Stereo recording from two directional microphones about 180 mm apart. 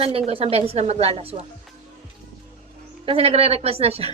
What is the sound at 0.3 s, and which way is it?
A woman's voice, 35° right (ahead or behind).